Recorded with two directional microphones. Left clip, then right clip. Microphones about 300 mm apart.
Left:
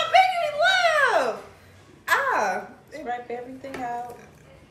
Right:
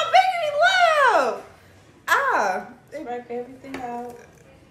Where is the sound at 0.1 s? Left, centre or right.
Centre.